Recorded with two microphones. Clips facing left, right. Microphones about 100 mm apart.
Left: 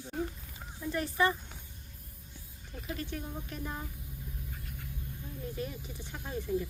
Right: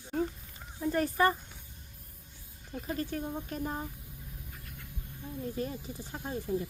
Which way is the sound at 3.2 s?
25° right (ahead or behind).